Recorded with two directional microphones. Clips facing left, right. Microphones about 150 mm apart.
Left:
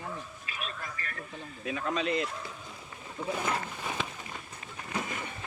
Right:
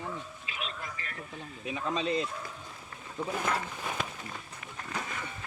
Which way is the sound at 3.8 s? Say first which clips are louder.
Even; centre (ahead or behind).